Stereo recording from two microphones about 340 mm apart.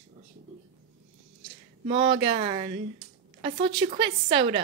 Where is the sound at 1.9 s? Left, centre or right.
Centre.